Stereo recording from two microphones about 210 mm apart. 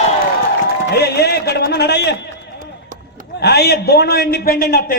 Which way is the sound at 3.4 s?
50° left (ahead or behind).